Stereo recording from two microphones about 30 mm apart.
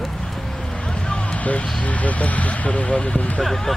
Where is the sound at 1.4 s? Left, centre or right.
Left.